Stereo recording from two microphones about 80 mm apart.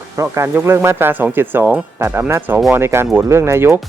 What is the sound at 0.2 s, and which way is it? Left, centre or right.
Speech, right.